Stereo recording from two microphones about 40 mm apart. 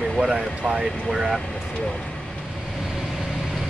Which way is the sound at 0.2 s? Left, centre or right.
Centre.